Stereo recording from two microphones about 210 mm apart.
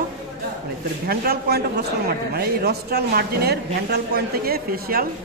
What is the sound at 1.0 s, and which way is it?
A man's voice, 45° right (ahead or behind).